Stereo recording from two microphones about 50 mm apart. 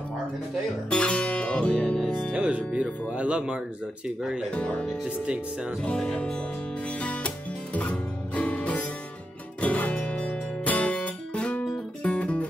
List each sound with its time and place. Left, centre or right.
0.8 s guitar: left
2.3 s speech: centre
6.9 s music: left
10.7 s guitar: left
12.0 s music: left